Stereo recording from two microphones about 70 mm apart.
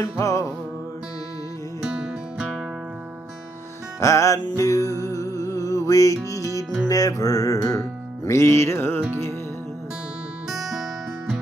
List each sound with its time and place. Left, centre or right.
0.0 s music: left
1.8 s music: centre
4.0 s music: left
8.3 s music: left
10.5 s music: centre